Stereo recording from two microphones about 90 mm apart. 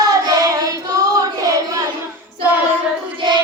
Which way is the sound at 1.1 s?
40° right (ahead or behind).